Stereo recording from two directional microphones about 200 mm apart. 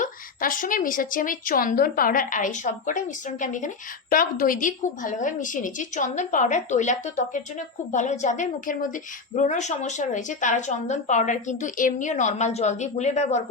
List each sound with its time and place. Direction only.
0.0 s a woman's voice: 45° left (ahead or behind)